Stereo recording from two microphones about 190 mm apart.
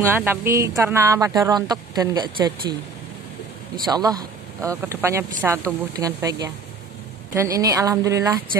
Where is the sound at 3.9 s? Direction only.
20° right (ahead or behind).